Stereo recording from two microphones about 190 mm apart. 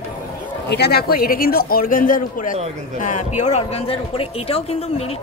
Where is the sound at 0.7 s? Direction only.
60° left (ahead or behind).